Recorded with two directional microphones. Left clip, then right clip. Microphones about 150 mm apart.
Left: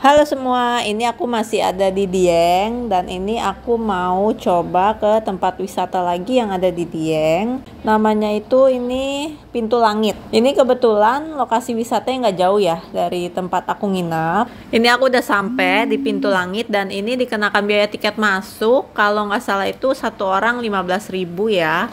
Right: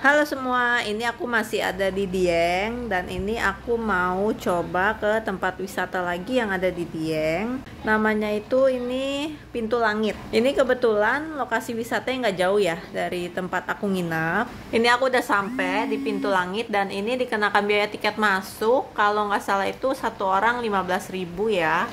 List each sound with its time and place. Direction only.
0.0 s a woman's voice: 30° left (ahead or behind)
4.5 s a woman's voice: 15° left (ahead or behind)
14.7 s a woman's voice: 35° left (ahead or behind)